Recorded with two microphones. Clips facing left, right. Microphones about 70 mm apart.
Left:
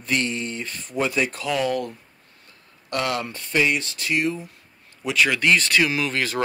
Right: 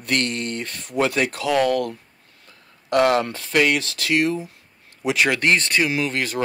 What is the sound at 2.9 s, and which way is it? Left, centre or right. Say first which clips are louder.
Speech: right 8 dB; right.